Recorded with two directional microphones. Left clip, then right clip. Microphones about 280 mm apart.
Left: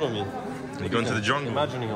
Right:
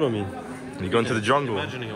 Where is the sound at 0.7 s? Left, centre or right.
Centre.